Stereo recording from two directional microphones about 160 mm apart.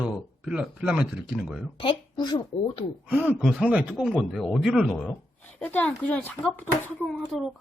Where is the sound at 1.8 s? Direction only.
30° left (ahead or behind).